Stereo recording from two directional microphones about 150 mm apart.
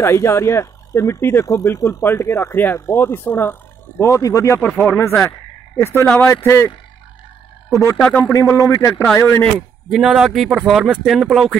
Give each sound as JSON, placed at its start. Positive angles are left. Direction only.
{"t": 0.0, "sound": "speech", "side_deg": 20}
{"t": 8.0, "sound": "speech", "side_deg": 10}
{"t": 8.3, "sound": "speech", "side_deg": 20}
{"t": 9.8, "sound": "speech", "side_deg": 0}